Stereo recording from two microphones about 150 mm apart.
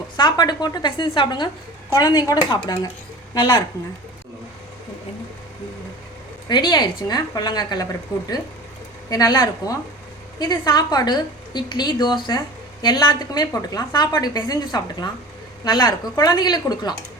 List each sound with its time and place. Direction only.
0.2 s a woman's voice: 30° left (ahead or behind)
6.5 s a woman's voice: 30° left (ahead or behind)
9.0 s a woman's voice: 25° left (ahead or behind)